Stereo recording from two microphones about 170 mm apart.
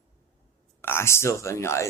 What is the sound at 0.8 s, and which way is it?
Speech, 15° left (ahead or behind).